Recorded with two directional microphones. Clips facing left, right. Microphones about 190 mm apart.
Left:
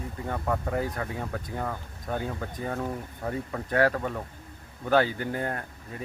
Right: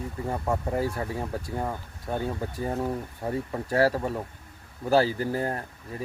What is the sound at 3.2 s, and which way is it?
Speech, 25° right (ahead or behind).